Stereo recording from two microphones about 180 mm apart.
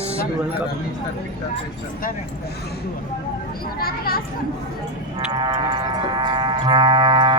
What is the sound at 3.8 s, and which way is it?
Speech, 55° left (ahead or behind).